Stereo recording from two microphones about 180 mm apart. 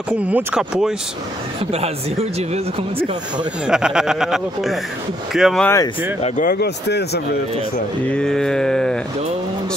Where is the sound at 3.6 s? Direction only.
5° right (ahead or behind).